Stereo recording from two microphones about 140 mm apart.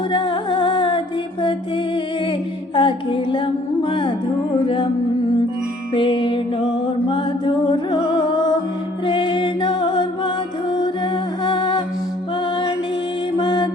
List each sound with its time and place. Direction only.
0.1 s music: 35° left (ahead or behind)
2.7 s music: 35° left (ahead or behind)
5.9 s music: 35° left (ahead or behind)
10.8 s humming: 35° left (ahead or behind)
13.3 s mantra: 35° left (ahead or behind)